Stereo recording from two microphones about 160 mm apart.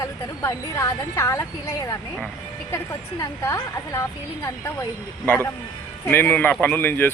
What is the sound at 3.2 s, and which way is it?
Speech, 20° left (ahead or behind).